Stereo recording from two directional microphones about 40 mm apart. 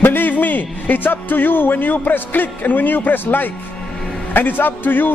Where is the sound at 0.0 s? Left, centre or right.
Left.